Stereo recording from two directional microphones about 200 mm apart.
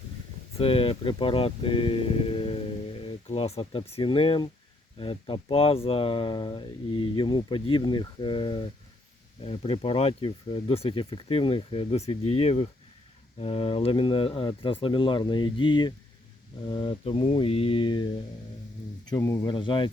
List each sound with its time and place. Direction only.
0.6 s speech: 25° left (ahead or behind)
19.1 s speech: 15° left (ahead or behind)